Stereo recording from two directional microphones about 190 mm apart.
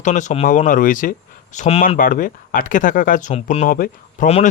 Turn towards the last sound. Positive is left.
turn(degrees=40)  # may be behind; listen again after turning